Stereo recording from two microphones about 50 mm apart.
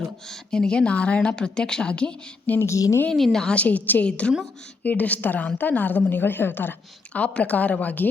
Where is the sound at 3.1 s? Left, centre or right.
Centre.